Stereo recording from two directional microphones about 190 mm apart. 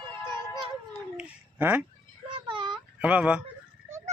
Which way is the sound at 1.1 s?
10° right (ahead or behind).